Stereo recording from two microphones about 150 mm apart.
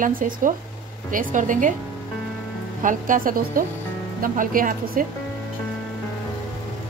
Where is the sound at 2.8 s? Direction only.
60° right (ahead or behind).